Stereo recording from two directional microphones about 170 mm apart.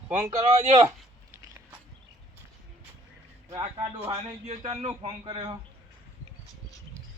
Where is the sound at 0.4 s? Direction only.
40° right (ahead or behind).